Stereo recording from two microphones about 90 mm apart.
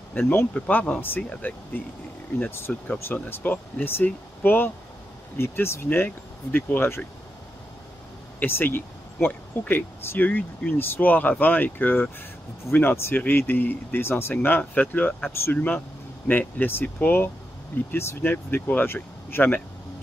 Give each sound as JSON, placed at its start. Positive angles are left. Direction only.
{"t": 0.1, "sound": "speech", "side_deg": 20}
{"t": 8.4, "sound": "speech", "side_deg": 20}